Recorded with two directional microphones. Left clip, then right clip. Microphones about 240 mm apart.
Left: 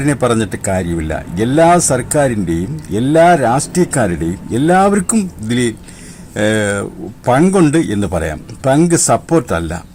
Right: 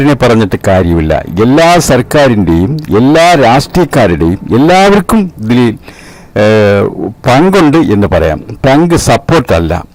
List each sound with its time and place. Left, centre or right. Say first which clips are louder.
0.0 s speech: right 7 dB; right